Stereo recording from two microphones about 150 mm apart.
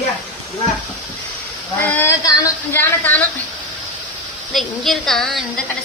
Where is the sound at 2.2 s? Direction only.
20° left (ahead or behind).